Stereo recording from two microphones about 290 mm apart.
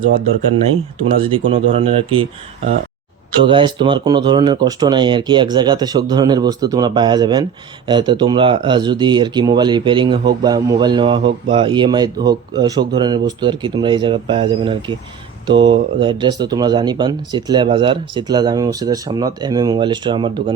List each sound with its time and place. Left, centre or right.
1.2 s speech: centre
3.4 s speech: centre